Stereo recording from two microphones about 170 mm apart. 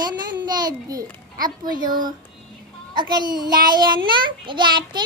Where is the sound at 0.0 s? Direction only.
25° right (ahead or behind).